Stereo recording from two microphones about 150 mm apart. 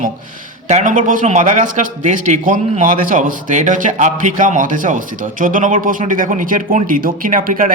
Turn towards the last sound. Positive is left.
turn(degrees=-65)  # may be behind; listen again after turning